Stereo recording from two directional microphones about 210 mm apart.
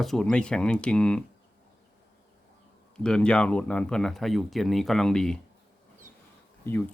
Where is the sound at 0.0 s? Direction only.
Centre (ahead or behind).